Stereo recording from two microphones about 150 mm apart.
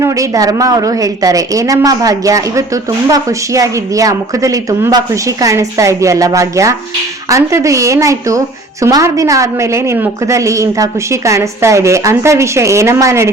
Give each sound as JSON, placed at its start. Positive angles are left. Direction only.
{"t": 0.0, "sound": "a woman's voice", "side_deg": -20}